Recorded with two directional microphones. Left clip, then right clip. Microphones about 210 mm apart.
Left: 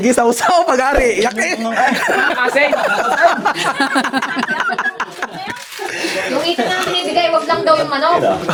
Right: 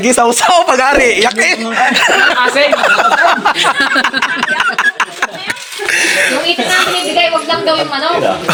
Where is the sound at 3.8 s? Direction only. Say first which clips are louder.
Right 4 dB; 55° left (ahead or behind).